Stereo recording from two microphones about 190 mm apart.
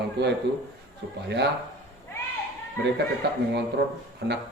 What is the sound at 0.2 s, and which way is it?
Speech, 60° right (ahead or behind).